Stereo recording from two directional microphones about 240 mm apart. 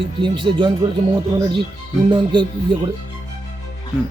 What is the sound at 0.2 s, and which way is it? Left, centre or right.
Speech, centre.